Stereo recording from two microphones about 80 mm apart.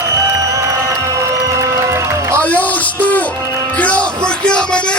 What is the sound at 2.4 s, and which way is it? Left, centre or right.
Music, centre.